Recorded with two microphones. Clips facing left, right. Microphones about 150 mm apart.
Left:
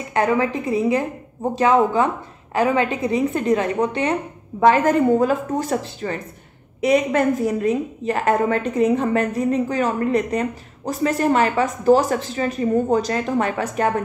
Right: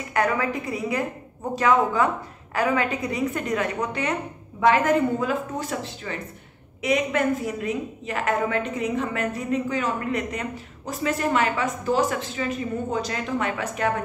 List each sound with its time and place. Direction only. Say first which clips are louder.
0.1 s a woman's voice: left 4 dB; 25° left (ahead or behind)